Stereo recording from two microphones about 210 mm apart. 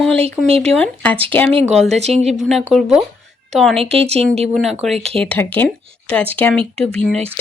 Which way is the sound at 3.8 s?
30° right (ahead or behind).